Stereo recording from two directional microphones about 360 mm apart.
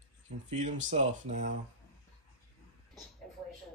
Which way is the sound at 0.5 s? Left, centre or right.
Centre.